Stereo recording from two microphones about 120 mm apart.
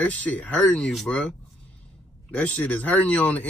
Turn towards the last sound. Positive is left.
turn(degrees=15)  # may be behind; listen again after turning